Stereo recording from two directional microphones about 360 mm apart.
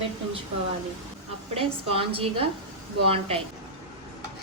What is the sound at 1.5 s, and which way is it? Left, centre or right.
Speech, centre.